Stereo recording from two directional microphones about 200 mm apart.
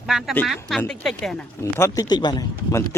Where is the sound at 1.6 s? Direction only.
15° left (ahead or behind).